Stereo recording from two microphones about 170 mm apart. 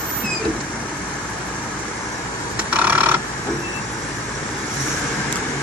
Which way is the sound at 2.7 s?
10° right (ahead or behind).